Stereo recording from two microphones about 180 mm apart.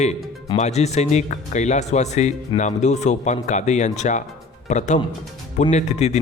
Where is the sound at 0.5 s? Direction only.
35° left (ahead or behind).